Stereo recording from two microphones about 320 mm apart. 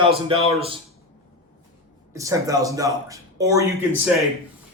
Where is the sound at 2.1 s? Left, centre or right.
Centre.